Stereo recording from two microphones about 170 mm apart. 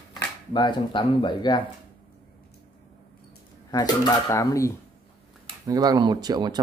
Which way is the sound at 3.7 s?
25° left (ahead or behind).